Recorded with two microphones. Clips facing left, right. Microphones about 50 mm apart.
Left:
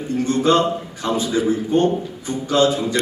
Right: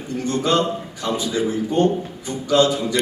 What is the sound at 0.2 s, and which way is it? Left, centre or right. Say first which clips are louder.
A man's voice: left 3 dB; left.